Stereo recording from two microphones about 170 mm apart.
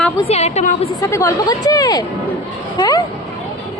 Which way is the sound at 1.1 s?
20° left (ahead or behind).